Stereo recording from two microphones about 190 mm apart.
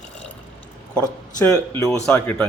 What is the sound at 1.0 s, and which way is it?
Speech, 15° left (ahead or behind).